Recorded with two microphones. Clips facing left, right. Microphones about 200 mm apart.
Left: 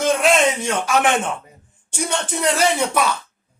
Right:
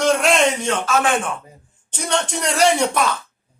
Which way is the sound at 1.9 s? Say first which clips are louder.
Right 1 dB; 5° left (ahead or behind).